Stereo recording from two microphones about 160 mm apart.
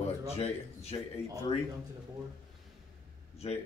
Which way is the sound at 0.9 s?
35° left (ahead or behind).